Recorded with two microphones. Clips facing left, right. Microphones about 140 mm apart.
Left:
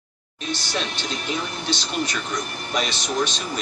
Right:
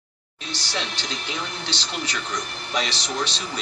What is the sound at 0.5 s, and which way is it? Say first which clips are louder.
Speech: left 3 dB; 15° left (ahead or behind).